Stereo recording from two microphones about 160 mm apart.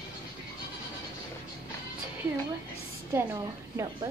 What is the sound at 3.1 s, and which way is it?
Speech, 20° right (ahead or behind).